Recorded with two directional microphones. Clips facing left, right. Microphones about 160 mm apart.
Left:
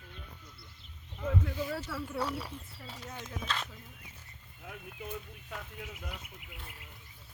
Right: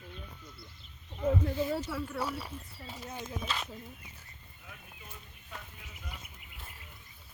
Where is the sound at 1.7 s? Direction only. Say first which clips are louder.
Right 3 dB; 15° right (ahead or behind).